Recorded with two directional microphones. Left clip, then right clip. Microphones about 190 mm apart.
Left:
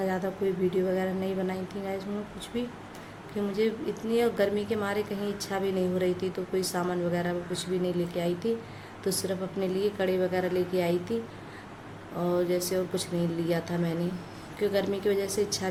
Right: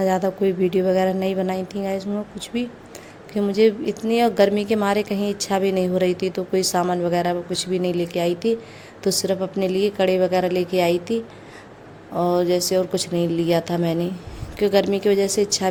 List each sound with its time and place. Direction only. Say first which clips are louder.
0.0 s a woman's voice: right 9 dB; 50° right (ahead or behind)
12.2 s a woman's voice: right 8 dB; 45° right (ahead or behind)